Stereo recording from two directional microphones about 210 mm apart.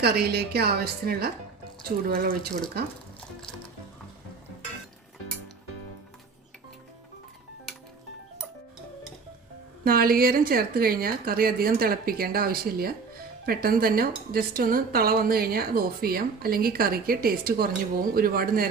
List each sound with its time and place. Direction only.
0.0 s speech: 50° right (ahead or behind)
9.8 s speech: 45° right (ahead or behind)